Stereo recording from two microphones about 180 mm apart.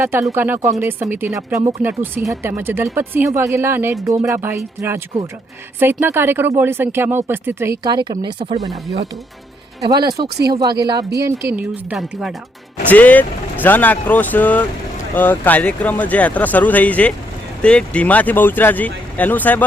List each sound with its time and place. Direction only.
0.0 s speech: 15° right (ahead or behind)
9.9 s speech: 20° right (ahead or behind)
10.2 s speech: 65° right (ahead or behind)
10.5 s speech: 20° right (ahead or behind); by 12.3 s 5° right (ahead or behind)
12.9 s speech: 10° left (ahead or behind)